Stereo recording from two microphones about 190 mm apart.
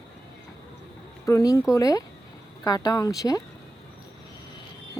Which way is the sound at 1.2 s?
15° left (ahead or behind).